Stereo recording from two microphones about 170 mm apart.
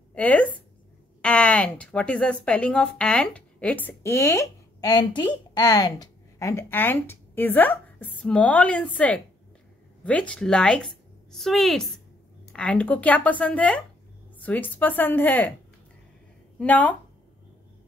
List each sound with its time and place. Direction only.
0.1 s speech: 10° left (ahead or behind)
16.5 s a woman's voice: 10° left (ahead or behind)